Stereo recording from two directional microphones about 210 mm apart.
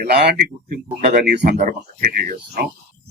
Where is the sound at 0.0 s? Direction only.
45° right (ahead or behind).